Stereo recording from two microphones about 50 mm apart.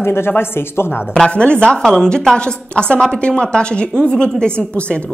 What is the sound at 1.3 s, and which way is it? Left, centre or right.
A woman's voice, left.